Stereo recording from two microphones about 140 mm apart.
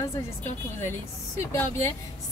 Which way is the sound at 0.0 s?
20° left (ahead or behind).